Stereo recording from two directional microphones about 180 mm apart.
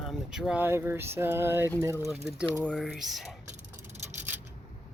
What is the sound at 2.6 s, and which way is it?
Speech, 5° left (ahead or behind).